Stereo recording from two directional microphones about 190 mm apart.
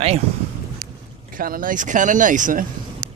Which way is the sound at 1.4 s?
50° right (ahead or behind).